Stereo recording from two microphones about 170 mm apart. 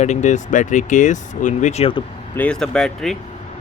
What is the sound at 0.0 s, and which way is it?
Speech, 45° left (ahead or behind).